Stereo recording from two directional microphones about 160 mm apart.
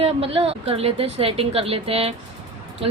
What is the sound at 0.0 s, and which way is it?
A woman's voice, 35° right (ahead or behind).